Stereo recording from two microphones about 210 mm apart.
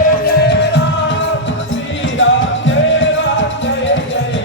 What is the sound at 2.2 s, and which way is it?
Music, 60° left (ahead or behind).